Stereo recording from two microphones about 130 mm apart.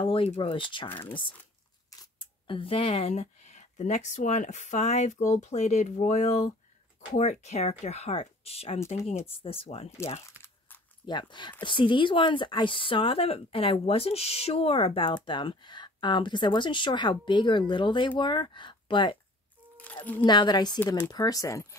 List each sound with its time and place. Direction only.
0.0 s speech: 45° left (ahead or behind)
0.8 s speech: 15° left (ahead or behind)
1.9 s speech: 40° left (ahead or behind)
11.1 s speech: 35° left (ahead or behind)
19.8 s a sound: 10° left (ahead or behind)
20.2 s speech: 35° left (ahead or behind)